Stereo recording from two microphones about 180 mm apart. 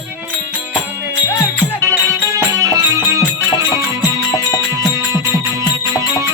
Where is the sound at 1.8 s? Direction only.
15° right (ahead or behind).